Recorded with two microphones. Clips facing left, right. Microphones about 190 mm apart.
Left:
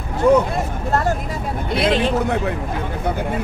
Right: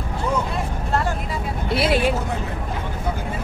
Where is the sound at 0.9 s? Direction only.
45° left (ahead or behind).